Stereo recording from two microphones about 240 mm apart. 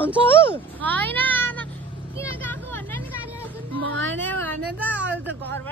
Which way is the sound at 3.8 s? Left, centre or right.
Right.